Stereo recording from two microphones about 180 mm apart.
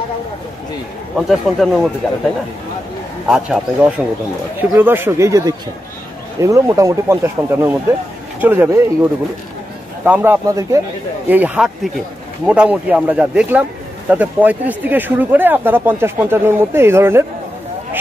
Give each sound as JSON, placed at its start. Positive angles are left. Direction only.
{"t": 1.3, "sound": "speech", "side_deg": 0}
{"t": 3.3, "sound": "a man's voice", "side_deg": -5}